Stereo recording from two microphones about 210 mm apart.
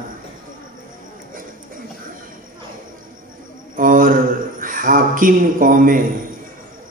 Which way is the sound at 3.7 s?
40° right (ahead or behind).